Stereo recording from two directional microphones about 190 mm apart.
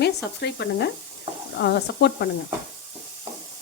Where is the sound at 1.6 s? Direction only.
60° left (ahead or behind).